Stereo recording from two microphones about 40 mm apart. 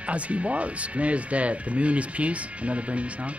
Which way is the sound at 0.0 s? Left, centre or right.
Right.